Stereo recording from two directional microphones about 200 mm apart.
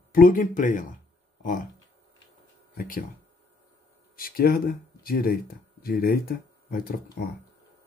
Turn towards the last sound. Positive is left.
turn(degrees=45)  # may be behind; listen again after turning